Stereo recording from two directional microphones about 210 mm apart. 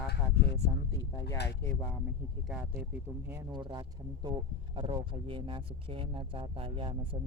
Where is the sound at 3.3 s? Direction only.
15° right (ahead or behind).